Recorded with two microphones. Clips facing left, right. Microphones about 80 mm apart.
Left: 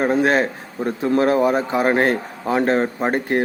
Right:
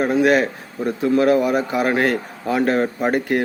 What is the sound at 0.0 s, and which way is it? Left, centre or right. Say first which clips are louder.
A man's voice: right 1 dB; left.